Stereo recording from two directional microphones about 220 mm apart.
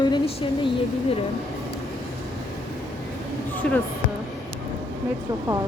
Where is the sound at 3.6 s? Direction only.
5° left (ahead or behind).